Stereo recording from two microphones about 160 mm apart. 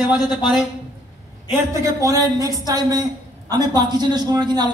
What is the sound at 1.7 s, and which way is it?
Speech, 20° right (ahead or behind).